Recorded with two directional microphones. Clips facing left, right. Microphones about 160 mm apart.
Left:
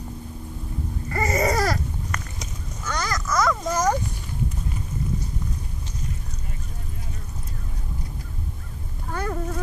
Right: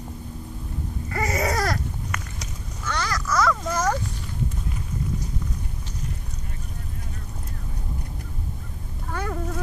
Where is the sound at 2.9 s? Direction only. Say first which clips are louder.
Even; 15° left (ahead or behind).